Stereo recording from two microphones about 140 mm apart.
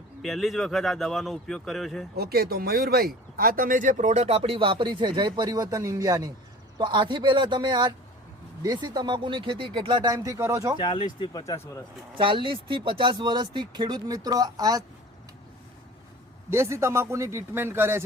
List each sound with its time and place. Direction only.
0.2 s a man's voice: centre (ahead or behind)
2.2 s speech: 90° right; by 10.8 s 20° right (ahead or behind)
10.8 s speech: 35° left (ahead or behind)
11.5 s speech: 20° left (ahead or behind)
12.1 s speech: 35° right (ahead or behind)
16.5 s a man's voice: 20° right (ahead or behind)